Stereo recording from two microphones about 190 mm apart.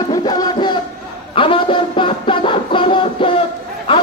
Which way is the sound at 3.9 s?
25° left (ahead or behind).